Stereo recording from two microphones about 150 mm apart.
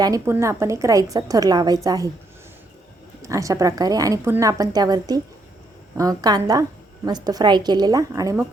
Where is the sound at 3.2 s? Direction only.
20° right (ahead or behind).